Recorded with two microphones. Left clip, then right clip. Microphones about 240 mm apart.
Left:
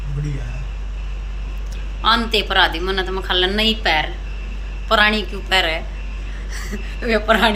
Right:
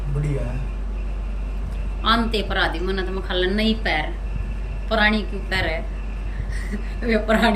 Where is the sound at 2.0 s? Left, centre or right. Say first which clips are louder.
Left 4 dB; centre.